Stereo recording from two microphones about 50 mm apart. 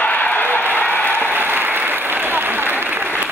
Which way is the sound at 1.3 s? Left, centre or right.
Right.